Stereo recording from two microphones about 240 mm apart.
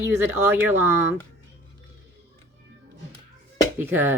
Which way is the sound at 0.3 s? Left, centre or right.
Centre.